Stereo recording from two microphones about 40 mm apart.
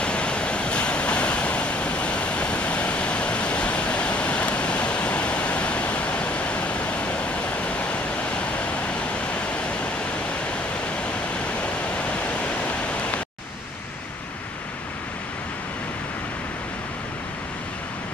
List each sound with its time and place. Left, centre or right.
0.0 s waves: left
11.6 s pink noise: left